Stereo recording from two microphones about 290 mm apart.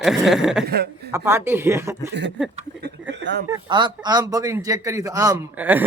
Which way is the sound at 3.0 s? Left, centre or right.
Right.